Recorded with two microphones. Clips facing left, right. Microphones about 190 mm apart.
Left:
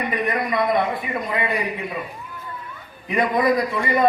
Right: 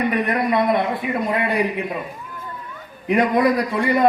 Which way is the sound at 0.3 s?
65° right (ahead or behind).